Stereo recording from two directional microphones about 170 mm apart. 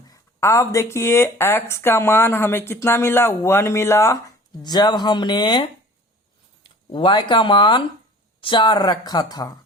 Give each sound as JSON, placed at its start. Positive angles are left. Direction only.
{"t": 0.1, "sound": "speech", "side_deg": 15}